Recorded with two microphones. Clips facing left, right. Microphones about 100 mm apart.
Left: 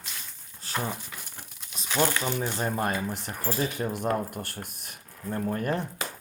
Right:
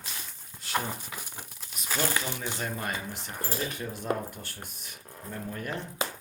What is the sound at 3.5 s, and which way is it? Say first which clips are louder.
Speech: left 5 dB; 90° left.